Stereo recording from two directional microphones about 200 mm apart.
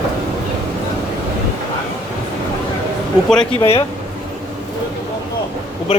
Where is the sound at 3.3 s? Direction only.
5° left (ahead or behind).